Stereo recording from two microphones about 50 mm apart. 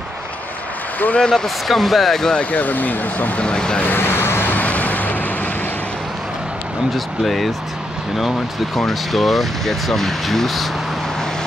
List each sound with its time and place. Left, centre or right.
0.9 s speech: left
1.2 s speech: centre
2.3 s speech: left
3.4 s speech: centre
3.8 s vehicle: left
4.6 s vehicle: left
7.2 s speech: centre
8.7 s speech: centre